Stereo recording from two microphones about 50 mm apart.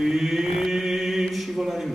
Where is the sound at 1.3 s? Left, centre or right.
Centre.